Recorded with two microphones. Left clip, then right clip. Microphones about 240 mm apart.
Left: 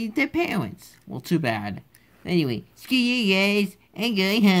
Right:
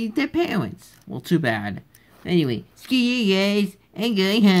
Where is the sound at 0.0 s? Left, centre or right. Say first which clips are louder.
Right 1 dB; centre.